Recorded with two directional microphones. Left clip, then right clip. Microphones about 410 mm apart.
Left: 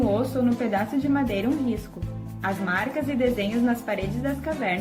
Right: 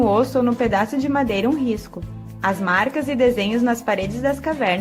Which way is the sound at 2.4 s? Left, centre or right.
Right.